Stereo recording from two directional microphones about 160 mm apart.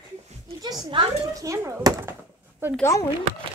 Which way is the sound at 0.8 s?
25° right (ahead or behind).